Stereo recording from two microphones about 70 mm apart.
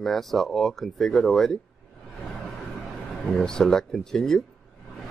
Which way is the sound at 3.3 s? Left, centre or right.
Centre.